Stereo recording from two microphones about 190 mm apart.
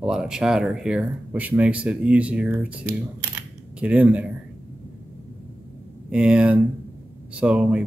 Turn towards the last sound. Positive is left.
turn(degrees=-5)  # may be behind; listen again after turning